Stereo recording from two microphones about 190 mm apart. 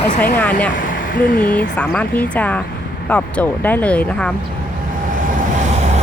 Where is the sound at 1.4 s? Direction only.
5° left (ahead or behind).